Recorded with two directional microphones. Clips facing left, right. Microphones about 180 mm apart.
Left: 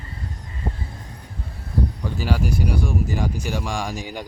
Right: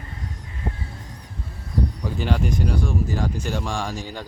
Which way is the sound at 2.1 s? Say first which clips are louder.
Even; 5° left (ahead or behind).